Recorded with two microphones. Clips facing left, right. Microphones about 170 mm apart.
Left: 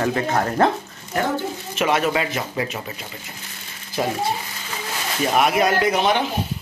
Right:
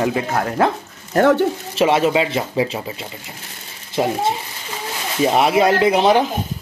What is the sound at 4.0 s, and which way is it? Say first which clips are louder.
Speech: right 4 dB; 20° right (ahead or behind).